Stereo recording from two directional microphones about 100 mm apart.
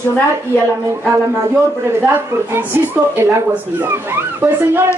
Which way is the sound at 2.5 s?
20° right (ahead or behind).